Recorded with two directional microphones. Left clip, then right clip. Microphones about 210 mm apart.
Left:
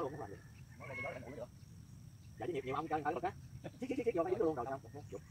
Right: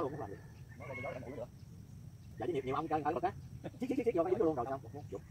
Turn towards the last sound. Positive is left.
turn(degrees=-40)  # may be behind; listen again after turning